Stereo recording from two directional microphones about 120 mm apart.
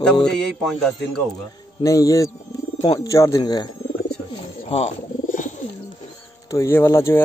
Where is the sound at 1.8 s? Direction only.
25° left (ahead or behind).